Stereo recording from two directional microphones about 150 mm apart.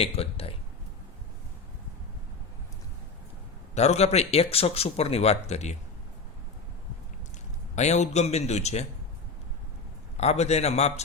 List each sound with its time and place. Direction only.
0.0 s speech: 40° left (ahead or behind)
3.8 s speech: 45° left (ahead or behind)
7.8 s speech: 50° left (ahead or behind)
10.2 s speech: 45° left (ahead or behind)